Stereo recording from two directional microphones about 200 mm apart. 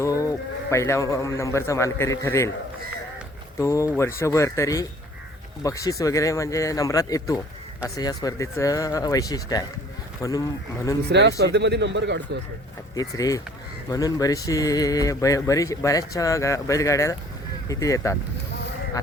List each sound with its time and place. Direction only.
0.0 s speech: 15° left (ahead or behind)
3.6 s speech: 15° left (ahead or behind)
11.1 s speech: 55° right (ahead or behind)
13.0 s speech: 15° left (ahead or behind)